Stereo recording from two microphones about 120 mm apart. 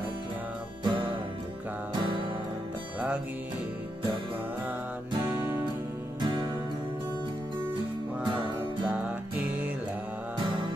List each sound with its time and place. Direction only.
0.8 s music: 45° right (ahead or behind)
5.2 s music: 15° right (ahead or behind)
6.2 s music: 40° right (ahead or behind)
8.3 s music: 45° right (ahead or behind)
8.9 s music: 15° right (ahead or behind)
10.4 s music: 40° right (ahead or behind)